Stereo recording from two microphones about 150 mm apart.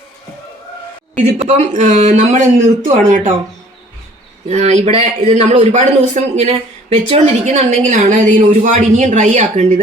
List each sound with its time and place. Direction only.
1.2 s speech: 50° right (ahead or behind)
4.4 s a man's voice: 50° right (ahead or behind)